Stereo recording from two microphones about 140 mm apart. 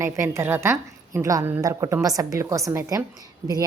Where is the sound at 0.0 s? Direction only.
20° right (ahead or behind).